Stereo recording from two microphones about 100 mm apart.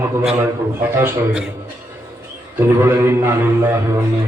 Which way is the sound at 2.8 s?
25° right (ahead or behind).